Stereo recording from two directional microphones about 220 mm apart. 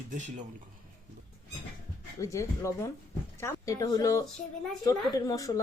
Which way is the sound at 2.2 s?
15° left (ahead or behind).